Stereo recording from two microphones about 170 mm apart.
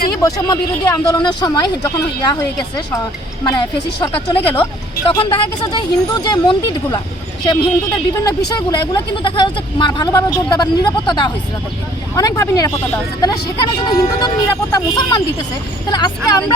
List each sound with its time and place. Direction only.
0.2 s speech: 20° left (ahead or behind)
13.8 s speech: 25° left (ahead or behind)